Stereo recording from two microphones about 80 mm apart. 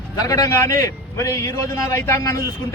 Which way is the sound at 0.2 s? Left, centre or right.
Left.